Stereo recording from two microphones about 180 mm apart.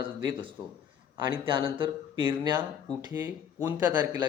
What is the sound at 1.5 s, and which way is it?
Speech, 30° right (ahead or behind).